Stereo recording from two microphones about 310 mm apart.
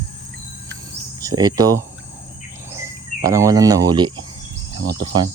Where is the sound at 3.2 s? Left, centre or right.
Centre.